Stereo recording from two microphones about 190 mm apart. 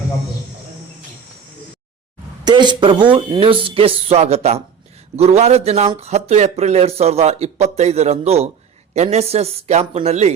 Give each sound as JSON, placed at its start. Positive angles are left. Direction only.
{"t": 2.4, "sound": "speech", "side_deg": -25}